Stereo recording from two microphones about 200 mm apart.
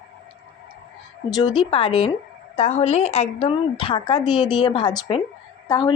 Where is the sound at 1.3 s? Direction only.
25° left (ahead or behind).